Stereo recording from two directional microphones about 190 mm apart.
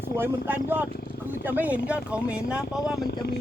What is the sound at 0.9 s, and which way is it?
Speech, 55° left (ahead or behind).